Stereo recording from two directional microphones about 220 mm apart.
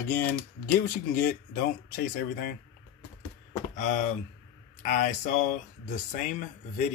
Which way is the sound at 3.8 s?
35° left (ahead or behind).